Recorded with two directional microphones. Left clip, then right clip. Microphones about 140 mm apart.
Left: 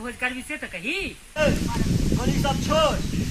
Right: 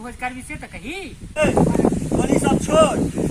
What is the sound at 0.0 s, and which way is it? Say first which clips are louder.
Speech: even; 15° right (ahead or behind).